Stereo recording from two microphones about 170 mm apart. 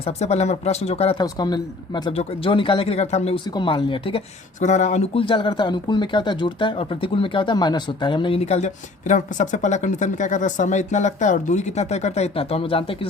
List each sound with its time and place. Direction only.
0.0 s speech: 40° left (ahead or behind)
1.2 s speech: 25° left (ahead or behind); by 3.4 s 40° left (ahead or behind)
3.4 s speech: 25° left (ahead or behind)
4.6 s speech: 45° left (ahead or behind)